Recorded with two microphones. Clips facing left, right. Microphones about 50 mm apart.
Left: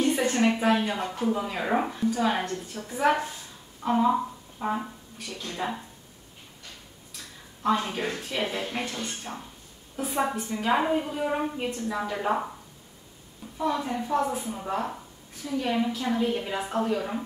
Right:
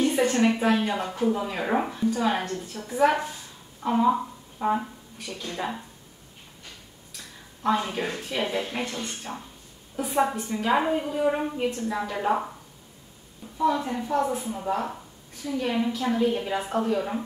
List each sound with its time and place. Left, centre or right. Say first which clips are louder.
0.0 s a woman's voice: right 2 dB; centre
3.8 s a sound: right 1 dB; centre
5.4 s a woman's voice: even; centre
7.6 s a woman's voice: right 1 dB; centre
9.3 s a woman's voice: right 1 dB; centre
13.6 s a woman's voice: right 3 dB; centre